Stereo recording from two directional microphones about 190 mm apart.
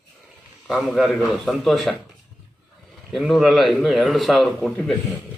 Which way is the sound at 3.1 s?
Centre (ahead or behind).